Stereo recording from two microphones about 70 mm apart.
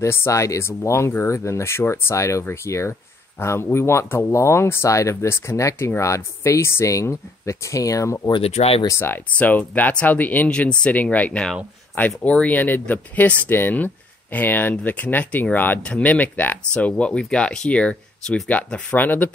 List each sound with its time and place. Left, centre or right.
0.0 s speech: left
8.8 s speech: left
9.4 s speech: left
17.0 s speech: centre
18.9 s speech: left